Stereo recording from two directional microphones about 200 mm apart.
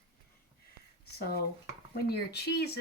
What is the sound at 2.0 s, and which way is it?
Speech, 50° left (ahead or behind).